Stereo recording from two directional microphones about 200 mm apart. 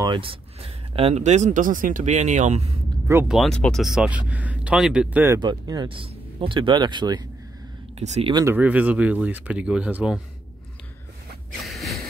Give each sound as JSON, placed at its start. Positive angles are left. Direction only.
{"t": 0.0, "sound": "speech", "side_deg": -25}
{"t": 3.1, "sound": "speech", "side_deg": -10}
{"t": 3.3, "sound": "speech", "side_deg": 5}
{"t": 5.4, "sound": "speech", "side_deg": -20}
{"t": 8.0, "sound": "speech", "side_deg": -30}
{"t": 8.5, "sound": "speech", "side_deg": -5}
{"t": 11.6, "sound": "a sound", "side_deg": 0}